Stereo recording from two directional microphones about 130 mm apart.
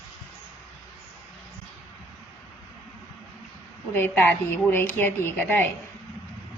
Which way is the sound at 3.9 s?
15° left (ahead or behind).